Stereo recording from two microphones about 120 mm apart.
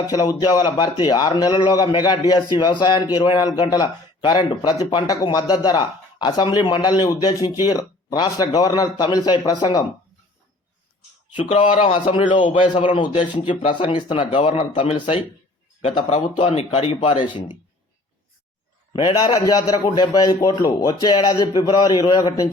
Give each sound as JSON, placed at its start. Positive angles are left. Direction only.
{"t": 0.1, "sound": "a man's voice", "side_deg": 30}
{"t": 11.3, "sound": "speech", "side_deg": 85}
{"t": 11.9, "sound": "a man's voice", "side_deg": 50}
{"t": 15.8, "sound": "speech", "side_deg": 75}
{"t": 16.5, "sound": "a man's voice", "side_deg": 60}
{"t": 18.9, "sound": "a man's voice", "side_deg": 40}